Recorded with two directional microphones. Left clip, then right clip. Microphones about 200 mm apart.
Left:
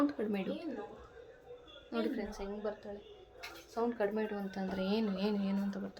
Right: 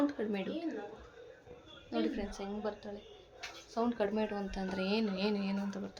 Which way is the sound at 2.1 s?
20° right (ahead or behind).